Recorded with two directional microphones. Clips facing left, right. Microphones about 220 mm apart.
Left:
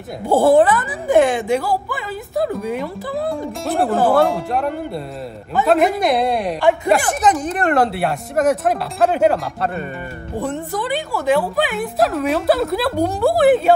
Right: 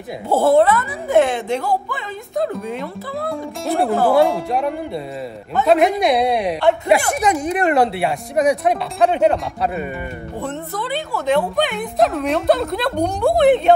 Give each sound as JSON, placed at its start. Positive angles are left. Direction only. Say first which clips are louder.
{"t": 0.3, "sound": "speech", "louder": "left 1 dB", "side_deg": 15}
{"t": 0.8, "sound": "speech", "louder": "left 1 dB", "side_deg": 0}
{"t": 10.4, "sound": "speech", "louder": "left 3 dB", "side_deg": 15}